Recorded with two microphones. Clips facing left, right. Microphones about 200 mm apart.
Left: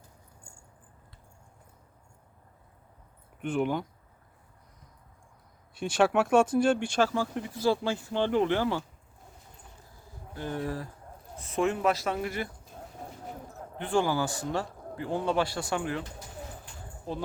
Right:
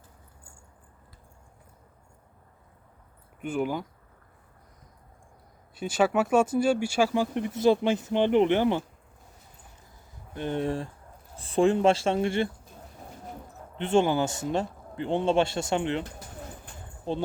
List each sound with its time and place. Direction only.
3.4 s speech: 5° right (ahead or behind)
5.7 s speech: 5° right (ahead or behind); by 8.8 s 20° right (ahead or behind)
10.3 s a man's voice: 25° right (ahead or behind)
13.7 s a man's voice: 25° right (ahead or behind)